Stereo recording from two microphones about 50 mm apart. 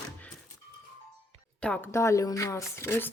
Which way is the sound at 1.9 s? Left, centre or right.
Left.